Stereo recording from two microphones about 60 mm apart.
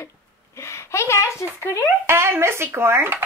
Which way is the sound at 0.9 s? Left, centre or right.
Left.